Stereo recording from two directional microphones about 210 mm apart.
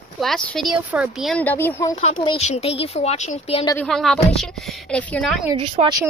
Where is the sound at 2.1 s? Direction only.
25° left (ahead or behind).